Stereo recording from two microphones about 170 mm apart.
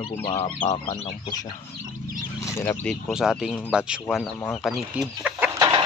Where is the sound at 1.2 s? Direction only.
20° left (ahead or behind).